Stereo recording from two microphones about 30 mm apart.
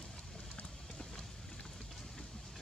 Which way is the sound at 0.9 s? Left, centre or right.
Left.